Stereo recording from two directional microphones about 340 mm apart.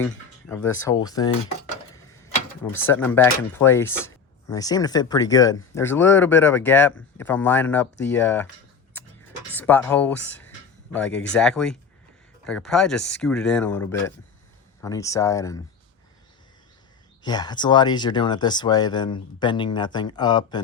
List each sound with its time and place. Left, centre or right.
0.0 s a sound: centre
0.9 s speech: centre
2.8 s speech: centre
9.6 s speech: centre
17.2 s speech: centre